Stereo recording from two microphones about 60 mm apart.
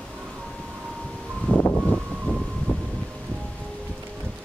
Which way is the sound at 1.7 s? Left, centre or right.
Centre.